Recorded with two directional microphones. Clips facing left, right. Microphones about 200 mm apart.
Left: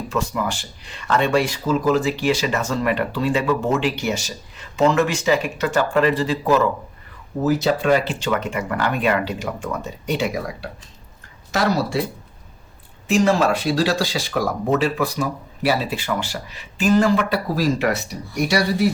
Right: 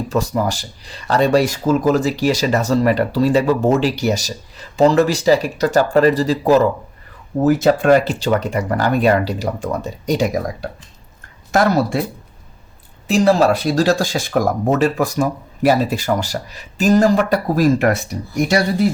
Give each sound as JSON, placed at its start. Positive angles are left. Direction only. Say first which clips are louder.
{"t": 0.1, "sound": "speech", "louder": "right 4 dB", "side_deg": -40}
{"t": 7.4, "sound": "speech", "louder": "right 5 dB", "side_deg": -50}
{"t": 13.1, "sound": "speech", "louder": "right 4 dB", "side_deg": -35}